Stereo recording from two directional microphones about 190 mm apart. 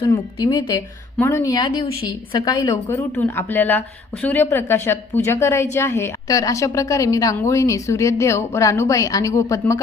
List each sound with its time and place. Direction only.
0.4 s speech: 25° left (ahead or behind)
1.2 s speech: 15° left (ahead or behind)
3.2 s a woman's voice: 10° left (ahead or behind)